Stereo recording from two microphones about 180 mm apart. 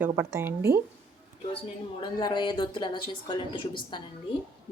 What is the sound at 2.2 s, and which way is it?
Speech, 25° left (ahead or behind).